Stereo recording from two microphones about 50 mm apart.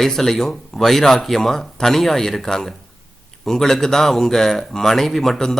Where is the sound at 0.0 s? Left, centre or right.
Centre.